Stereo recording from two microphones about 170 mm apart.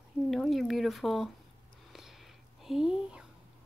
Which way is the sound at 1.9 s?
Centre (ahead or behind).